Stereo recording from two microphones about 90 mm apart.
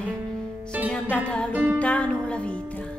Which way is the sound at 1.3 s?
10° left (ahead or behind).